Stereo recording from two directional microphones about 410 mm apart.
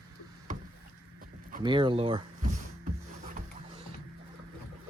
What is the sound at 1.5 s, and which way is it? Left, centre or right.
Speech, centre.